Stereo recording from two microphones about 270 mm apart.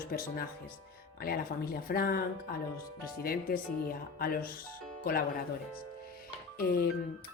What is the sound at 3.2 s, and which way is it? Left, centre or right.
Speech, left.